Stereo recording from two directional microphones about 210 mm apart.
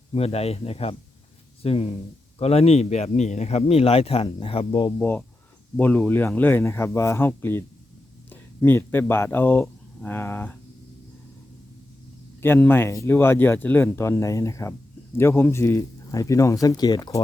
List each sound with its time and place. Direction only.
0.1 s speech: 30° left (ahead or behind)
4.9 s speech: 10° left (ahead or behind)
12.4 s speech: 10° left (ahead or behind)